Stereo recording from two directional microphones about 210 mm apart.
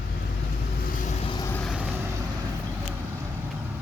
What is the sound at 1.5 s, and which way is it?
Vehicle, centre (ahead or behind).